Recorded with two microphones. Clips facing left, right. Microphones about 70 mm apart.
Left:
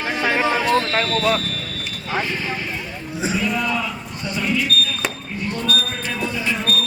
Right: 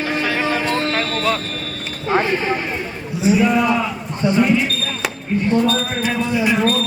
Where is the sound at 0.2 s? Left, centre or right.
Left.